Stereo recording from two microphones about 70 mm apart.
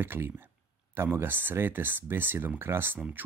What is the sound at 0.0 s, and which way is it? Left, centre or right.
Speech, right.